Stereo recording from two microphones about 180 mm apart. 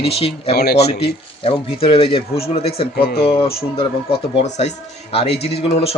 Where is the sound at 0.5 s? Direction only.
60° left (ahead or behind).